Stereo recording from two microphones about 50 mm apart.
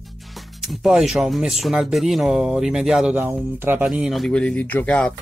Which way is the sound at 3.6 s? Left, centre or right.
Right.